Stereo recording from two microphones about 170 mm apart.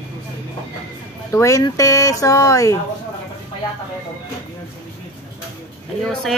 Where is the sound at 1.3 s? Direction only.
20° left (ahead or behind).